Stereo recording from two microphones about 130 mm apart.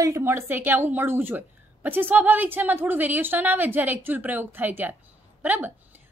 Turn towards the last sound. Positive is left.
turn(degrees=-15)  # may be behind; listen again after turning